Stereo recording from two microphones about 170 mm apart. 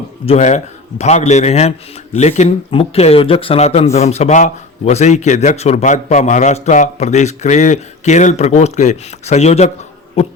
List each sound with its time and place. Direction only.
0.3 s a man's voice: 45° left (ahead or behind)